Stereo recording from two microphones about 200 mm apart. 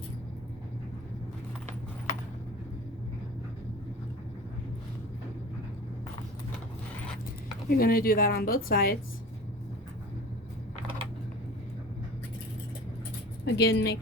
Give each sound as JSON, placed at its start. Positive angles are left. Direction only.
{"t": 7.7, "sound": "a woman's voice", "side_deg": 50}
{"t": 13.4, "sound": "speech", "side_deg": 55}